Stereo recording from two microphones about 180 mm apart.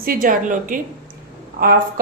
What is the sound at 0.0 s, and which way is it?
A woman's voice, 50° right (ahead or behind).